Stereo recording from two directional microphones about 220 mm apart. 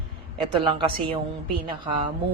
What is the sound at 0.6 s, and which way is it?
Speech, 20° right (ahead or behind).